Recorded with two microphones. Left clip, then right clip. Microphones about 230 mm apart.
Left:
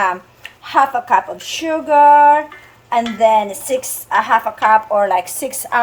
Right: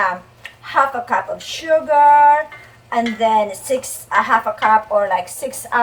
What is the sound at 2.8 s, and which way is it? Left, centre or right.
A woman's voice, left.